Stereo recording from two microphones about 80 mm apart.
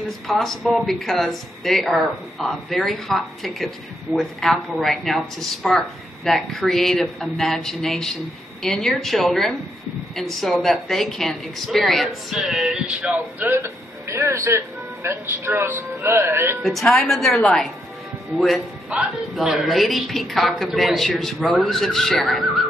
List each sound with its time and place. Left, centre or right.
0.3 s speech: centre
13.1 s speech: right
16.6 s speech: centre
18.9 s a woman's voice: centre
19.3 s speech: centre